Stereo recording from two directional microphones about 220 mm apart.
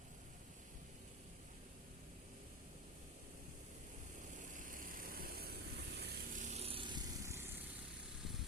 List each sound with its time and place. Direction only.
4.4 s vehicle: 35° right (ahead or behind)
6.4 s vehicle: 30° right (ahead or behind); by 7.5 s 10° right (ahead or behind)
8.2 s vehicle: centre (ahead or behind)